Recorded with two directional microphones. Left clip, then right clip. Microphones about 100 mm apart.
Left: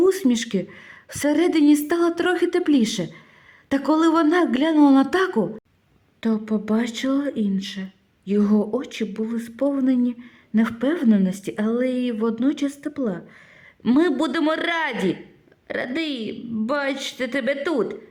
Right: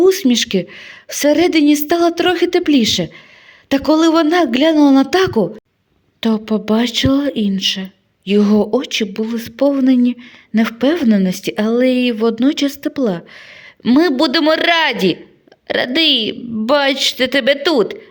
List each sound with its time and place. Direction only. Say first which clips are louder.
0.0 s a woman's voice: right 7 dB; 15° right (ahead or behind)
6.1 s a woman's voice: right 7 dB; 30° right (ahead or behind)